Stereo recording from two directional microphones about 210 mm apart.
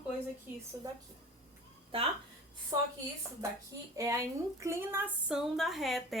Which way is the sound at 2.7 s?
15° right (ahead or behind).